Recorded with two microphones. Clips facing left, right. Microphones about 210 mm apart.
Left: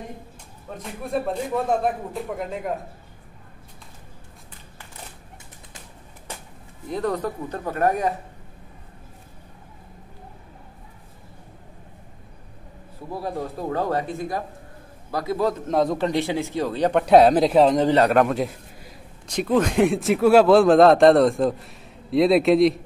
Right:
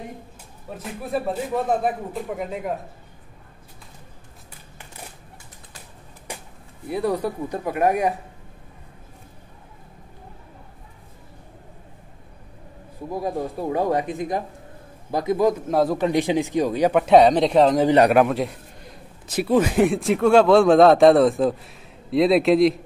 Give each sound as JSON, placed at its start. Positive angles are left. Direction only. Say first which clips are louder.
{"t": 0.7, "sound": "a man's voice", "louder": "even", "side_deg": 0}
{"t": 6.3, "sound": "a sound", "louder": "right 2 dB", "side_deg": -15}
{"t": 6.9, "sound": "speech", "louder": "right 2 dB", "side_deg": -10}
{"t": 13.1, "sound": "speech", "louder": "right 3 dB", "side_deg": -15}
{"t": 15.7, "sound": "a man's voice", "louder": "right 1 dB", "side_deg": -5}
{"t": 16.0, "sound": "speech", "louder": "right 3 dB", "side_deg": -15}
{"t": 17.7, "sound": "a man's voice", "louder": "right 2 dB", "side_deg": -15}